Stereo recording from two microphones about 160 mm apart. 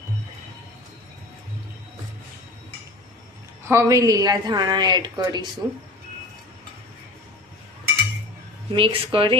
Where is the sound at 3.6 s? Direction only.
20° right (ahead or behind).